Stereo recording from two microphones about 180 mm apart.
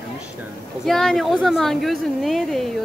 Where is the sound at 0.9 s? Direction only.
Centre (ahead or behind).